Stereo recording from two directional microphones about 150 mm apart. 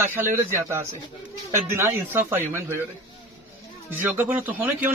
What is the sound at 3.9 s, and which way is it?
Speech, 10° right (ahead or behind).